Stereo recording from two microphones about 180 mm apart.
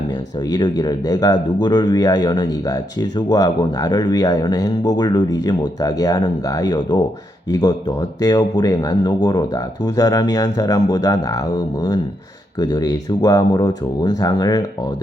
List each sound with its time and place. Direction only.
0.5 s speech: 20° left (ahead or behind)